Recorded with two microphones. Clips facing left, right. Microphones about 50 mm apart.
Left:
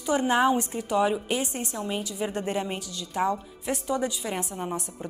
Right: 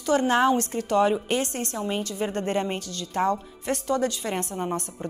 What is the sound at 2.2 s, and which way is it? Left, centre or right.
Speech, centre.